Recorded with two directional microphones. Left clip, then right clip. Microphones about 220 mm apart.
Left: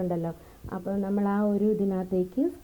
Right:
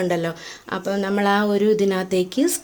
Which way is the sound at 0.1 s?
30° right (ahead or behind).